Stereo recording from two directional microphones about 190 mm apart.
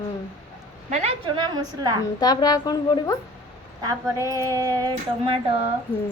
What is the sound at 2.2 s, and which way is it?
Speech, 20° left (ahead or behind).